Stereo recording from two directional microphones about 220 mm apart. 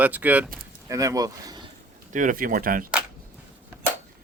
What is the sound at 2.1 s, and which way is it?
Speech, 35° right (ahead or behind).